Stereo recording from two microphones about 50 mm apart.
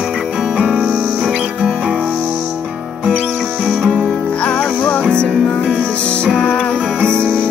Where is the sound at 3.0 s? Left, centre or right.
Right.